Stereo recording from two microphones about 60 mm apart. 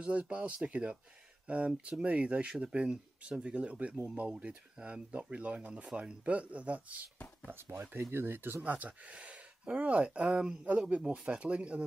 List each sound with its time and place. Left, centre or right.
0.0 s speech: centre
3.9 s speech: right
4.2 s speech: centre
7.4 s speech: right
8.6 s speech: right